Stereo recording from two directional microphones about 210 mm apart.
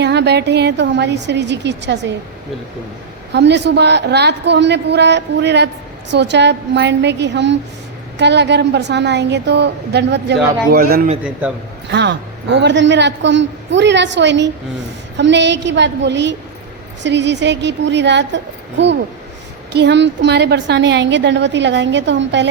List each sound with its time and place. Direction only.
0.0 s a woman's voice: 55° right (ahead or behind)
3.3 s a woman's voice: 55° right (ahead or behind)
11.2 s a man's voice: 5° right (ahead or behind)
11.9 s a woman's voice: 55° right (ahead or behind)